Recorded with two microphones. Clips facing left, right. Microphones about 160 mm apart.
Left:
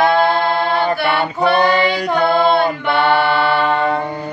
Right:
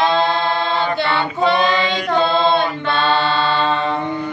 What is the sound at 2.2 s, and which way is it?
Music, 20° right (ahead or behind).